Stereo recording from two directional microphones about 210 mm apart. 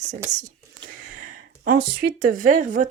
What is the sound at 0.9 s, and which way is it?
Speech, 40° right (ahead or behind).